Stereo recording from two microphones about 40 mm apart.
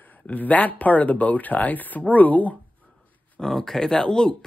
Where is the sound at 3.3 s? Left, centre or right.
Centre.